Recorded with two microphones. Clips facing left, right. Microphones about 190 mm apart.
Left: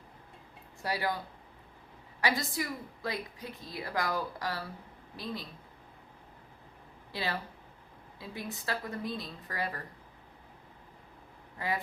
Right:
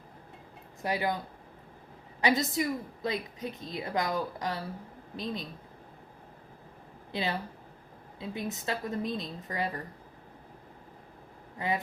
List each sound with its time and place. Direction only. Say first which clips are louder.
0.8 s a woman's voice: right 3 dB; 20° right (ahead or behind)
2.2 s a woman's voice: right 5 dB; 20° right (ahead or behind)
7.1 s a woman's voice: right 3 dB; 20° right (ahead or behind)
11.5 s speech: right 3 dB; 20° right (ahead or behind)